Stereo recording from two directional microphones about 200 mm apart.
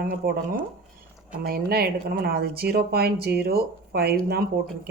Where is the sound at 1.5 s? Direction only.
50° right (ahead or behind).